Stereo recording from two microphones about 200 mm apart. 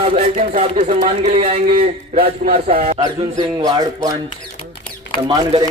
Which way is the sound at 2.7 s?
30° right (ahead or behind).